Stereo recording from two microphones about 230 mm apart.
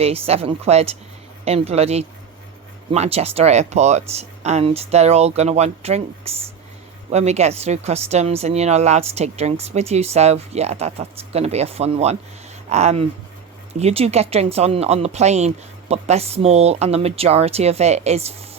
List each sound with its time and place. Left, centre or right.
0.0 s speech: right